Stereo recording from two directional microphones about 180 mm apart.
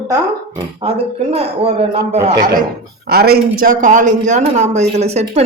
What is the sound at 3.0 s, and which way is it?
Speech, 60° right (ahead or behind).